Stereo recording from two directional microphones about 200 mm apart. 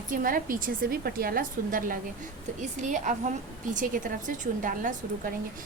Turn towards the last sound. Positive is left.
turn(degrees=-45)  # may be behind; listen again after turning